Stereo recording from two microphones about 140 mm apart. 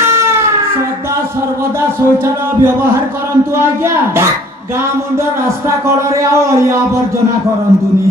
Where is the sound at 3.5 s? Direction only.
20° right (ahead or behind).